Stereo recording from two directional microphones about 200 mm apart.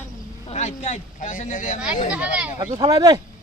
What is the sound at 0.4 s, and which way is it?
Speech, 35° left (ahead or behind).